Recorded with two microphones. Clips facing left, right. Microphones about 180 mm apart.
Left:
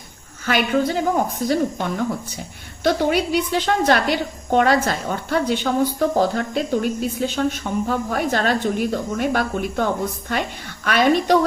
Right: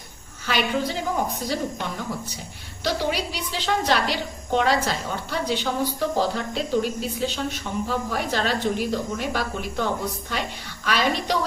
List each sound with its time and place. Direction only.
0.4 s a woman's voice: 50° left (ahead or behind)
2.8 s a woman's voice: 55° left (ahead or behind)